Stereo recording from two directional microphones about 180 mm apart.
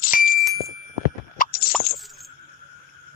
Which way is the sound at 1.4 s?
55° left (ahead or behind).